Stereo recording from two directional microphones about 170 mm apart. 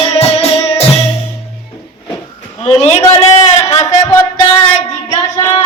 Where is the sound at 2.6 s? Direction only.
40° left (ahead or behind).